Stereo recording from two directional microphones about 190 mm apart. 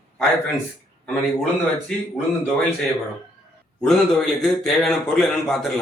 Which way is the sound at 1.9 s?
5° left (ahead or behind).